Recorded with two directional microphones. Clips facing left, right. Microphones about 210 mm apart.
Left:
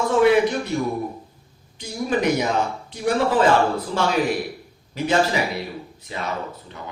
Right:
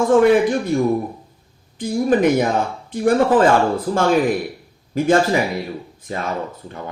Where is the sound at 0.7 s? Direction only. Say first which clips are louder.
Right 6 dB; 50° right (ahead or behind).